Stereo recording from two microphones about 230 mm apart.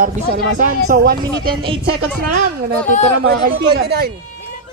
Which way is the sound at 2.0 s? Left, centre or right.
Right.